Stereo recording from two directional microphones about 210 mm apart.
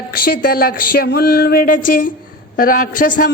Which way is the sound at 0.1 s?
45° left (ahead or behind).